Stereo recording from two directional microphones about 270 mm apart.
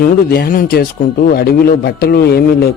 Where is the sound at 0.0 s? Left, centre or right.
Left.